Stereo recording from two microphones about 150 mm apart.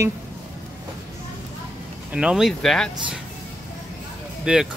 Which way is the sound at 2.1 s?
5° right (ahead or behind).